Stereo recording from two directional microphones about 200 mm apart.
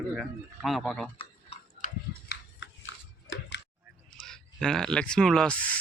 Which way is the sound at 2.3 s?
65° left (ahead or behind).